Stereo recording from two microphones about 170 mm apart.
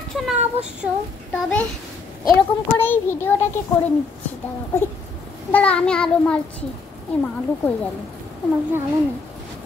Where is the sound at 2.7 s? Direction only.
10° left (ahead or behind).